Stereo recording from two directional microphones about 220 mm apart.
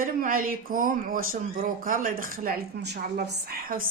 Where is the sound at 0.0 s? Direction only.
40° right (ahead or behind).